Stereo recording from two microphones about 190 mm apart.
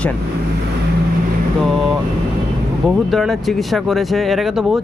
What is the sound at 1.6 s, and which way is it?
Speech, centre (ahead or behind).